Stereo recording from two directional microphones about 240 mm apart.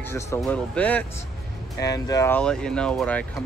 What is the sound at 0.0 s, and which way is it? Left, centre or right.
Speech, centre.